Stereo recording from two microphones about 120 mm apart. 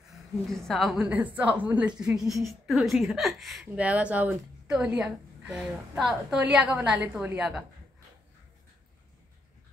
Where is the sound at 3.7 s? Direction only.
10° right (ahead or behind).